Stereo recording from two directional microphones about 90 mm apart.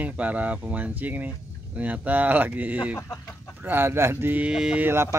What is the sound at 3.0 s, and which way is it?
Chicken, 35° left (ahead or behind).